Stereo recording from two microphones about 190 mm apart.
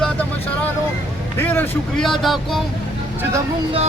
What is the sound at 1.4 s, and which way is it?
A man's voice, 10° left (ahead or behind).